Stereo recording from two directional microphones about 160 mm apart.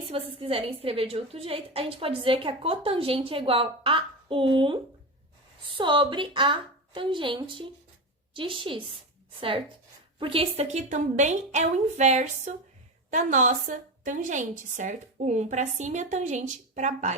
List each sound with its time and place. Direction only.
0.1 s a woman's voice: 35° right (ahead or behind)
10.2 s a woman's voice: 35° right (ahead or behind)